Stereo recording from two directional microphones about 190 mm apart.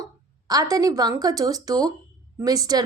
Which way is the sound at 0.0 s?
20° right (ahead or behind).